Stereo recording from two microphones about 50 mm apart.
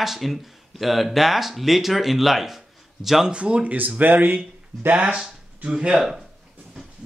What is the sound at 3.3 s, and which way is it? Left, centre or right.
Speech, right.